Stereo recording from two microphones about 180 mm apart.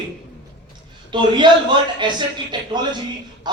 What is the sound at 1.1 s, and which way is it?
A man's voice, 25° right (ahead or behind).